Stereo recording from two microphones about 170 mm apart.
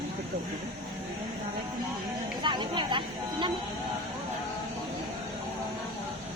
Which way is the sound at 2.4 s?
30° right (ahead or behind).